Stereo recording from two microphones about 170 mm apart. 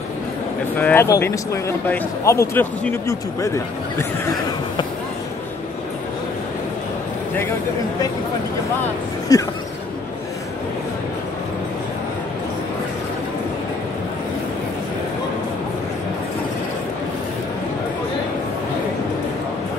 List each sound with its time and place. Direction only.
0.7 s speech: 10° left (ahead or behind)
9.3 s speech: 20° left (ahead or behind)